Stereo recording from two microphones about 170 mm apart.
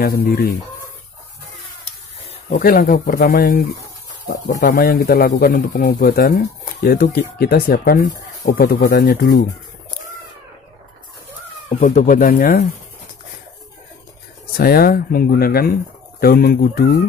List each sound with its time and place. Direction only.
0.0 s speech: 65° left (ahead or behind)
2.6 s speech: 60° left (ahead or behind)
11.8 s speech: 50° left (ahead or behind)
14.6 s speech: 65° left (ahead or behind)